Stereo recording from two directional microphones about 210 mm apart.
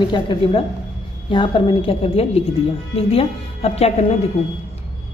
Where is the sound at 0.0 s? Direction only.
25° left (ahead or behind).